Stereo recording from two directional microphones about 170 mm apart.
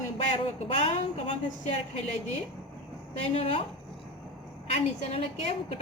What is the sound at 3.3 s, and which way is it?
Speech, 35° left (ahead or behind).